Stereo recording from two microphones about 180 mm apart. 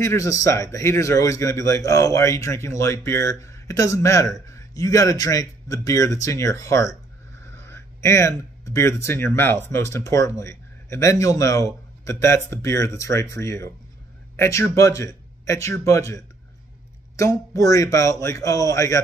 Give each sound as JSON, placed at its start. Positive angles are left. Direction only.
{"t": 0.0, "sound": "a man's voice", "side_deg": 15}
{"t": 17.2, "sound": "a man's voice", "side_deg": 15}